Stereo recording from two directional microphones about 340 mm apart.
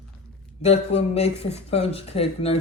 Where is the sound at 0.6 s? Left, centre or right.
Centre.